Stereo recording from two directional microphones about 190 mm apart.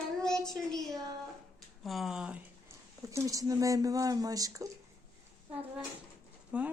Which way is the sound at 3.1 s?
15° right (ahead or behind).